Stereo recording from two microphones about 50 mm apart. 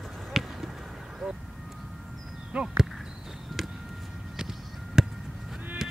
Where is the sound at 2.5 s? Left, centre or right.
Centre.